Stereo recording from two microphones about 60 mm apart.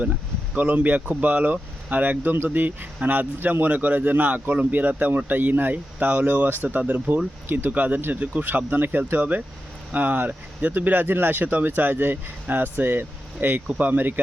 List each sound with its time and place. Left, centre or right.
0.5 s speech: right
6.7 s speech: right
7.4 s speech: right
7.7 s speech: right